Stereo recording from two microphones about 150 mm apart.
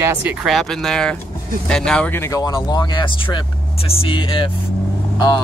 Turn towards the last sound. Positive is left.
turn(degrees=30)  # may be behind; listen again after turning